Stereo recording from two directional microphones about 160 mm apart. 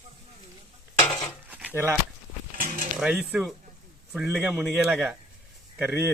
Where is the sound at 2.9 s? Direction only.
5° right (ahead or behind).